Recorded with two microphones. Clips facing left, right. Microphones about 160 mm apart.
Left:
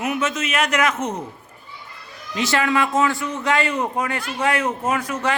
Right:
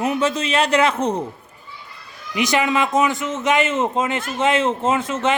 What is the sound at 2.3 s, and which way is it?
A man's voice, 15° right (ahead or behind).